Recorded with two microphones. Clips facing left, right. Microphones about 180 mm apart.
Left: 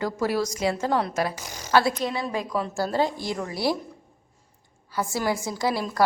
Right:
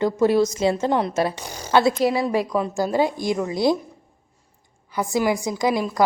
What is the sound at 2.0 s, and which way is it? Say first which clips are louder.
A woman's voice: right 8 dB; 10° right (ahead or behind).